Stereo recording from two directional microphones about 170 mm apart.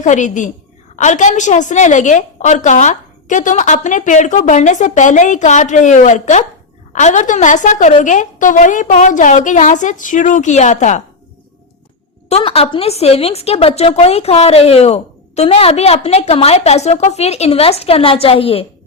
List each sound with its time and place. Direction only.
0.0 s a woman's voice: 45° left (ahead or behind)
12.3 s a woman's voice: 35° left (ahead or behind)